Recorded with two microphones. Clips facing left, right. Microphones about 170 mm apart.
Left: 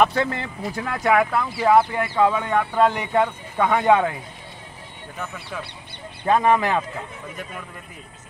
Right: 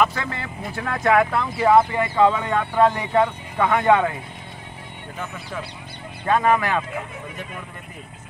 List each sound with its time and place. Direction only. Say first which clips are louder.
0.1 s speech: left 6 dB; 30° left (ahead or behind)
0.7 s speech: right 1 dB; 5° left (ahead or behind)
6.2 s speech: left 1 dB; 20° left (ahead or behind)